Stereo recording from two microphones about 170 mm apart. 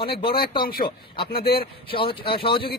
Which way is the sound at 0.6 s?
60° left (ahead or behind).